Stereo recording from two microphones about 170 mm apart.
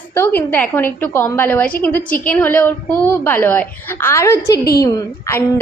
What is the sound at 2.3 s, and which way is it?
A woman's voice, 10° left (ahead or behind).